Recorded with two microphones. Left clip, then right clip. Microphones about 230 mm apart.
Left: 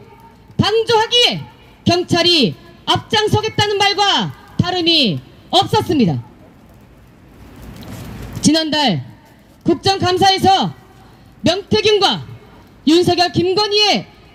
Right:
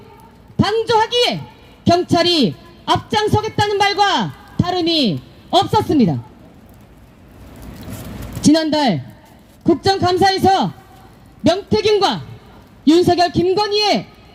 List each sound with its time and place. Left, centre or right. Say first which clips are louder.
0.5 s a sound: left 1 dB; left
1.8 s a woman's voice: even; left
8.4 s a man's voice: even; left